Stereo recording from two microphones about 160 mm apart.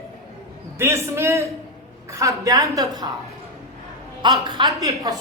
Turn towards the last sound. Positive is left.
turn(degrees=-20)  # may be behind; listen again after turning